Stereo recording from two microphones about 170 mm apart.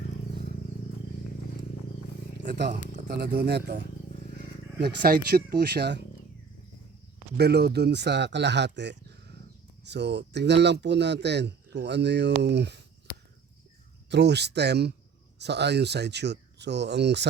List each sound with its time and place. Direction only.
2.5 s speech: 75° right (ahead or behind)
4.8 s speech: 60° right (ahead or behind)
7.3 s speech: 75° right (ahead or behind)
13.1 s cricket: 25° left (ahead or behind)
14.1 s speech: 90° right